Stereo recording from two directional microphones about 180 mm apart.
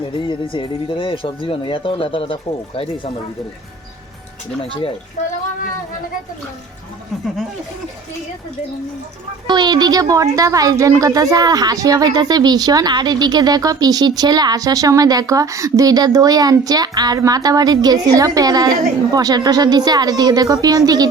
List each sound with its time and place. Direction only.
0.0 s speech: 25° left (ahead or behind)
9.5 s speech: 25° right (ahead or behind)